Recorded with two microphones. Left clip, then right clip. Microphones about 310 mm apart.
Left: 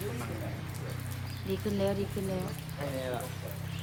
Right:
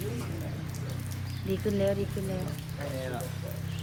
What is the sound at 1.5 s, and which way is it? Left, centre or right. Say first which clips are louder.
Speech: right 3 dB; centre.